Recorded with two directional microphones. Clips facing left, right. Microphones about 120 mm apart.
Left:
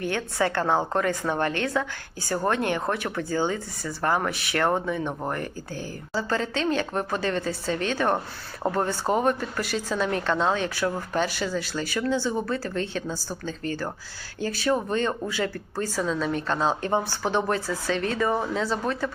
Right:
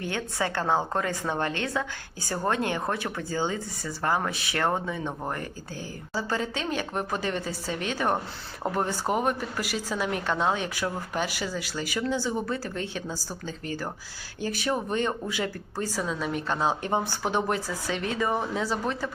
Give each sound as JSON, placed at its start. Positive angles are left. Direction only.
{"t": 0.0, "sound": "speech", "side_deg": -20}